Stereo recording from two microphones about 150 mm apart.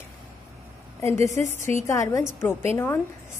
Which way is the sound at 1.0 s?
20° left (ahead or behind).